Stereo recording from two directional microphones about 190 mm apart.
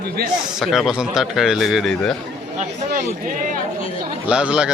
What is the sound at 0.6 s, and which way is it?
A man's voice, centre (ahead or behind).